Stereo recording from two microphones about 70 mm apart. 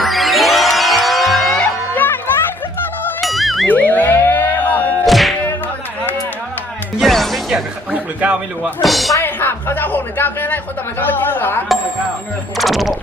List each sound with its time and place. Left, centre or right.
0.0 s music: centre
2.0 s music: left
3.2 s music: centre
3.7 s a sound: left
5.0 s thunk: centre
7.0 s music: centre
7.9 s a sound: centre
8.8 s speech: centre
9.2 s speech: left
12.5 s speech: centre